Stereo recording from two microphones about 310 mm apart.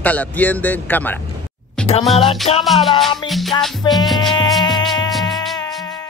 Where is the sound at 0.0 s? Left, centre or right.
Centre.